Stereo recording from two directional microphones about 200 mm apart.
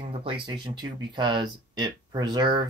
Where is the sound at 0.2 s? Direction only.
25° right (ahead or behind).